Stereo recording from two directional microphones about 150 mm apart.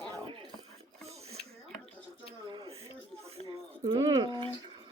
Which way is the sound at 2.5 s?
35° right (ahead or behind).